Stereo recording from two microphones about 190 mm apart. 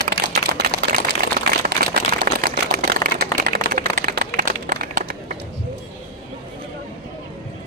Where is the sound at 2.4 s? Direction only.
50° right (ahead or behind).